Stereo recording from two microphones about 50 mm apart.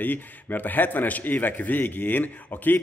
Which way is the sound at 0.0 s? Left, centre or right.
Left.